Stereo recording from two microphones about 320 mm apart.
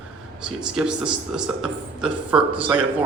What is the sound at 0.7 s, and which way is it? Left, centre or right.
A man's voice, centre.